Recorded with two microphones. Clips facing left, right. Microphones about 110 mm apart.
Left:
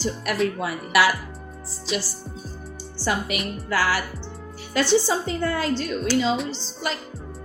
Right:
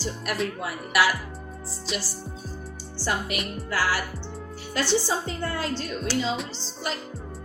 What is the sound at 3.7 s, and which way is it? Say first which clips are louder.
Speech: left 3 dB; 75° left (ahead or behind).